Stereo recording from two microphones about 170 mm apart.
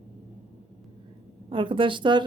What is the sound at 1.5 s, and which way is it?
Speech, 30° right (ahead or behind).